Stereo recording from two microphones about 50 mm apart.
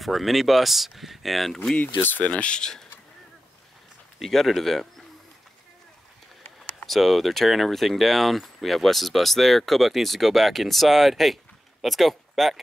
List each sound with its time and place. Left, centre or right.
0.0 s speech: centre
2.0 s speech: left
2.2 s speech: left
4.2 s speech: centre
6.9 s speech: centre